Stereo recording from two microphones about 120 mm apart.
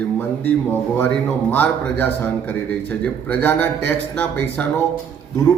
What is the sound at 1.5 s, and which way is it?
A man's voice, 15° left (ahead or behind).